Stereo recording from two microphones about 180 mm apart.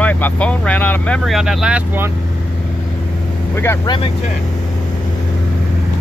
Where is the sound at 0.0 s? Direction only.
10° left (ahead or behind).